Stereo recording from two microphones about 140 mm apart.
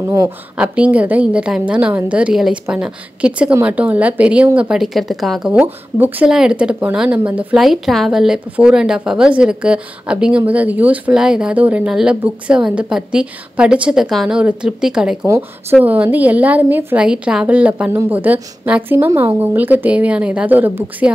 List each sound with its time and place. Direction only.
0.0 s speech: 25° right (ahead or behind)
0.6 s a woman's voice: 10° right (ahead or behind)
5.5 s a woman's voice: 10° right (ahead or behind)
15.2 s speech: 20° right (ahead or behind)